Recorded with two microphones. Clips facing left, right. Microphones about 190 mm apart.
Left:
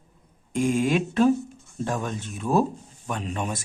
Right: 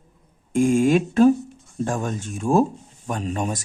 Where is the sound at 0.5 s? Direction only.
50° right (ahead or behind).